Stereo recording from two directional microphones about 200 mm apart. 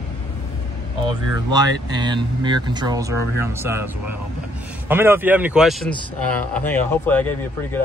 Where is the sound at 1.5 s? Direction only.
20° right (ahead or behind).